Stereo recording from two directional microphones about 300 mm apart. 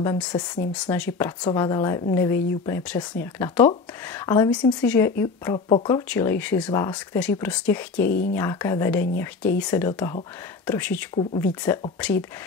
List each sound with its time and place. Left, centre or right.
0.0 s speech: centre
8.1 s speech: left
8.4 s speech: centre